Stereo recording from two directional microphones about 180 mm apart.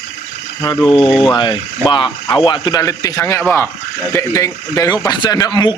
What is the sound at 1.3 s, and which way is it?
A man's voice, 25° left (ahead or behind).